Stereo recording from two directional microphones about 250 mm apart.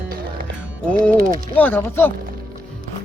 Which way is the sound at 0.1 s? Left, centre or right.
Right.